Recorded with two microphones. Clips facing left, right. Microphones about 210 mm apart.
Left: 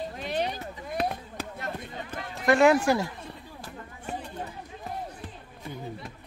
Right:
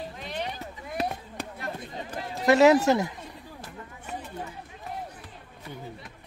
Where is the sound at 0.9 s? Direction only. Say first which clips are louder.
Left 1 dB; centre (ahead or behind).